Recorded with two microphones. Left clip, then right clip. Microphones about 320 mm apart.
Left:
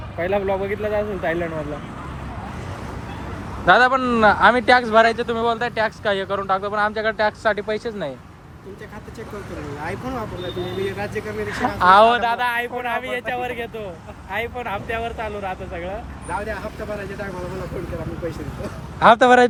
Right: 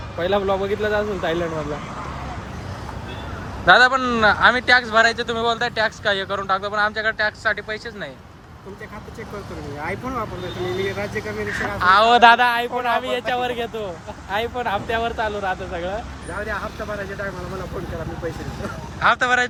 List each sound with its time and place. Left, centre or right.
0.2 s speech: centre
3.7 s speech: centre
11.5 s speech: centre
12.2 s speech: right
12.5 s speech: centre
18.9 s speech: centre